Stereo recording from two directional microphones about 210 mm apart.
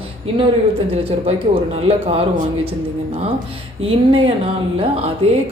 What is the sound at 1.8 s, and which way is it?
Speech, 30° right (ahead or behind).